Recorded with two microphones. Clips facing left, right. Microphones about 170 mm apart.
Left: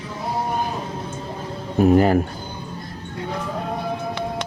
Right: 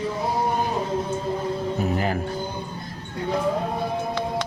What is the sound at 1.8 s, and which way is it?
Speech, 50° left (ahead or behind).